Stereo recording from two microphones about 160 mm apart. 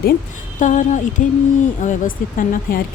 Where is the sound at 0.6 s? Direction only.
50° left (ahead or behind).